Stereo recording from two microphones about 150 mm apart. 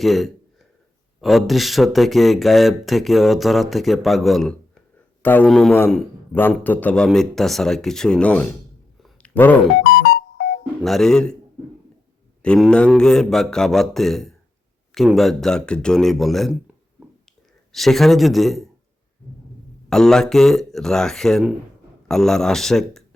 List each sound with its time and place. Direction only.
0.0 s speech: centre (ahead or behind)
9.0 s a sound: 10° left (ahead or behind)
10.2 s music: 90° left
10.8 s speech: 5° left (ahead or behind)
12.4 s speech: centre (ahead or behind)
17.7 s speech: centre (ahead or behind)
19.9 s speech: 5° left (ahead or behind)